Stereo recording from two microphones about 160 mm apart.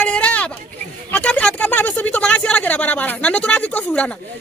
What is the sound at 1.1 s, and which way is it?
Speech, 5° left (ahead or behind).